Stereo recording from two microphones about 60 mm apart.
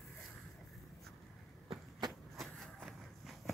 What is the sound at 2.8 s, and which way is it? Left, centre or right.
Walk, centre.